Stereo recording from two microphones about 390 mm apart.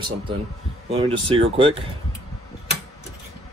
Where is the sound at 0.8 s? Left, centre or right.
Centre.